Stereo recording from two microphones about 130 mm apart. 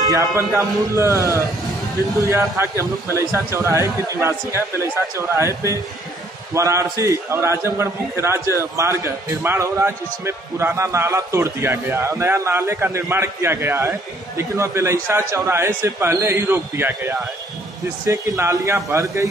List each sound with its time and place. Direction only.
0.0 s a man's voice: 25° right (ahead or behind)